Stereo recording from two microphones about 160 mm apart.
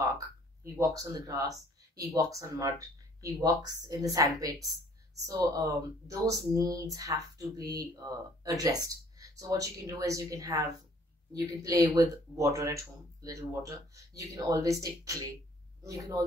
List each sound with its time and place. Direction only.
0.7 s speech: 20° right (ahead or behind)